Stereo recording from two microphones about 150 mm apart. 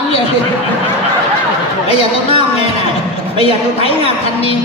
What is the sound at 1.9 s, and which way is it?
A woman's voice, 40° left (ahead or behind).